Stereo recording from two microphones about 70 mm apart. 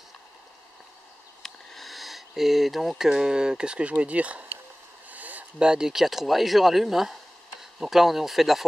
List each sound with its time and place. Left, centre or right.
1.4 s speech: centre
5.1 s a sound: right
5.7 s speech: centre